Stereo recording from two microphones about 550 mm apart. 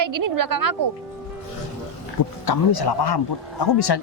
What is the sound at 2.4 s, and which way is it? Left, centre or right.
Speech, left.